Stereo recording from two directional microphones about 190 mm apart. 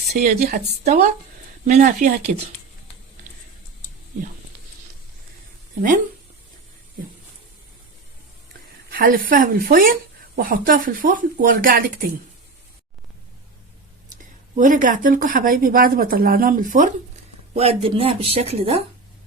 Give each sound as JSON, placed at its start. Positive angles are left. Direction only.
{"t": 0.1, "sound": "a woman's voice", "side_deg": -35}
{"t": 0.3, "sound": "a woman's voice", "side_deg": -50}
{"t": 1.6, "sound": "speech", "side_deg": -40}
{"t": 8.9, "sound": "a woman's voice", "side_deg": -50}
{"t": 14.1, "sound": "a woman's voice", "side_deg": -45}
{"t": 17.5, "sound": "speech", "side_deg": -30}